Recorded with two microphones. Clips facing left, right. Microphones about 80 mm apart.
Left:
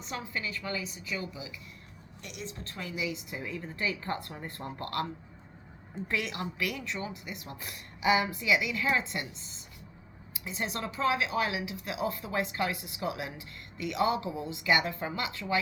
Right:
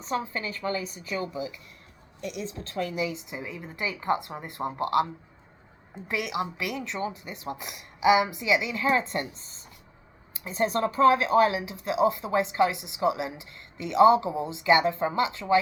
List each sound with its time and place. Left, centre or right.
0.0 s a woman's voice: right
2.8 s a woman's voice: right
3.2 s speech: right
7.6 s speech: centre